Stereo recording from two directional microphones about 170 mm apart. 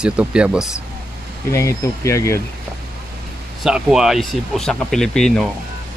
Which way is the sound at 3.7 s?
5° right (ahead or behind).